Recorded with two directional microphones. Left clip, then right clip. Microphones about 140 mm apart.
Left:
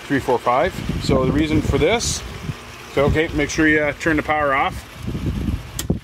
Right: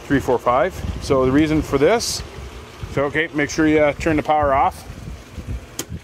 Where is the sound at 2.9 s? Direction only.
5° right (ahead or behind).